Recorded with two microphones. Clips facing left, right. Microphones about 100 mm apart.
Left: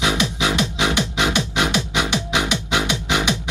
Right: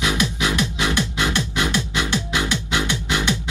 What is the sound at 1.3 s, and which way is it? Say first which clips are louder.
Music: left 2 dB; 70° left (ahead or behind).